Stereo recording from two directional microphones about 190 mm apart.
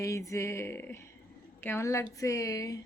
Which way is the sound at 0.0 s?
15° left (ahead or behind).